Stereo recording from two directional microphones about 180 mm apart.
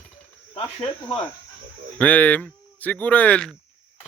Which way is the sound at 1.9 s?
10° left (ahead or behind).